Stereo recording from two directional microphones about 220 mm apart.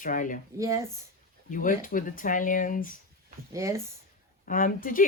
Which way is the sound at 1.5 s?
35° left (ahead or behind).